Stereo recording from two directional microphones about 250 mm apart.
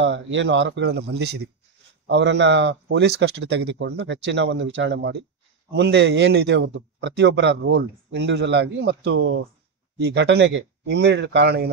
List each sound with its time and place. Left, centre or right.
0.0 s a man's voice: right